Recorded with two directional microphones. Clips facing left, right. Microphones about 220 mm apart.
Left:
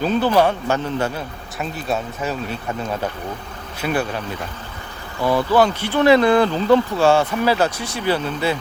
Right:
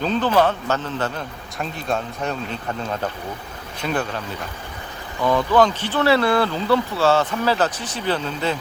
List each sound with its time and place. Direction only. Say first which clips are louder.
0.0 s speech: left 2 dB; 10° left (ahead or behind)
3.8 s speech: left 2 dB; 10° left (ahead or behind)
5.2 s speech: left 1 dB; 10° left (ahead or behind)